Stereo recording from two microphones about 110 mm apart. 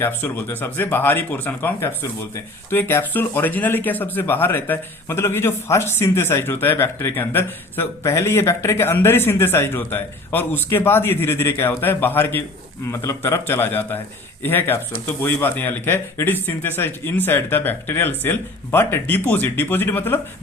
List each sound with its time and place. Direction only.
0.0 s speech: 15° left (ahead or behind)